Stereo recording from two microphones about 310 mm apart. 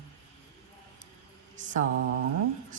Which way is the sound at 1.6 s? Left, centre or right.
Right.